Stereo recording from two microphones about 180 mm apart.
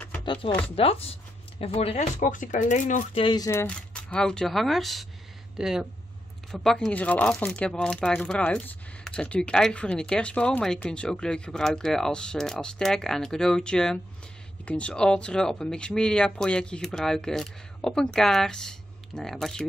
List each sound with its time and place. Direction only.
0.2 s chopping: 25° left (ahead or behind)
0.7 s speech: 30° left (ahead or behind)
3.2 s speech: 25° left (ahead or behind); by 19.6 s 5° left (ahead or behind)